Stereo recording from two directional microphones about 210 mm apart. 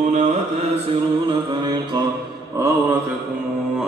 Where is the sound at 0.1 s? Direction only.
35° right (ahead or behind).